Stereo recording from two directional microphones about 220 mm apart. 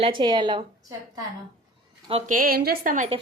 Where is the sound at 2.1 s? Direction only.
35° right (ahead or behind).